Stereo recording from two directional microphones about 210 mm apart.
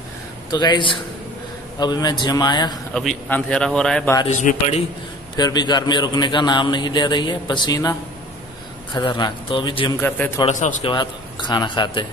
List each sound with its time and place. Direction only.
0.5 s a man's voice: 20° left (ahead or behind)
2.9 s a man's voice: 5° left (ahead or behind)
4.3 s a man's voice: 35° left (ahead or behind)
5.3 s a man's voice: 20° left (ahead or behind)
8.9 s a man's voice: 20° left (ahead or behind)
9.9 s a man's voice: 10° left (ahead or behind)
10.4 s a man's voice: 35° left (ahead or behind)
10.9 s a man's voice: 20° left (ahead or behind)